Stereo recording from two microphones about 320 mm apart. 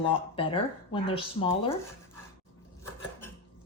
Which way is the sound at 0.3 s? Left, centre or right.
Centre.